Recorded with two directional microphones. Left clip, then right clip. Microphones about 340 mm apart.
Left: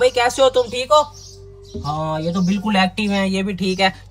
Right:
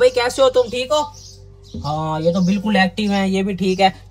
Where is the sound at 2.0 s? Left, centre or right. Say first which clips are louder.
Right 1 dB; left.